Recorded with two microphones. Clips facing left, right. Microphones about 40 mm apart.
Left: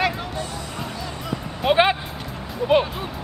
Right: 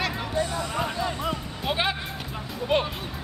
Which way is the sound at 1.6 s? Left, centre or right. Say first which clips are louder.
Left 10 dB; left.